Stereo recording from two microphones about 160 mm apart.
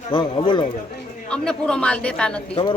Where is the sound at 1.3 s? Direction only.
5° left (ahead or behind).